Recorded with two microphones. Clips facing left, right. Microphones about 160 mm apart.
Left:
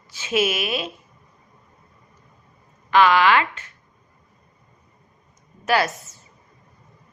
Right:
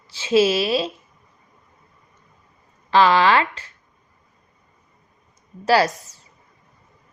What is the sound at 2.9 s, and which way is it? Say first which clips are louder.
Speech: right 1 dB; 35° right (ahead or behind).